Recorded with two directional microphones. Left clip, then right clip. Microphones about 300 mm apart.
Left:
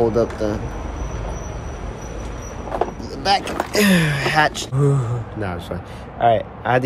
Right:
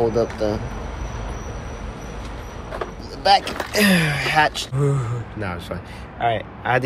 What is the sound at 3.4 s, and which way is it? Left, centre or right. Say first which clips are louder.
Speech: left 1 dB; left.